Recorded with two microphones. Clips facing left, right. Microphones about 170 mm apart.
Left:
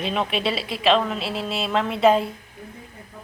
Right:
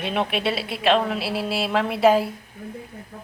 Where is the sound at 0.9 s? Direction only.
10° right (ahead or behind).